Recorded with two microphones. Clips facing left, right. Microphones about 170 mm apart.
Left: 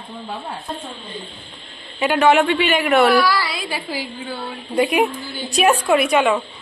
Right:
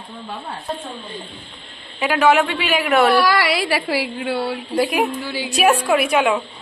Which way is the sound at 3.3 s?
75° right (ahead or behind).